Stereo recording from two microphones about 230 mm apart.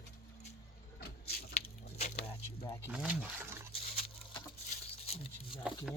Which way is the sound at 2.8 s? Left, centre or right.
Centre.